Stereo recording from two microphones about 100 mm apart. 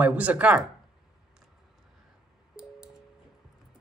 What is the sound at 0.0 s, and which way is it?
Speech, 15° right (ahead or behind).